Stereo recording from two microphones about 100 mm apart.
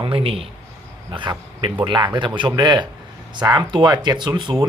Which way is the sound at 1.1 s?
55° right (ahead or behind).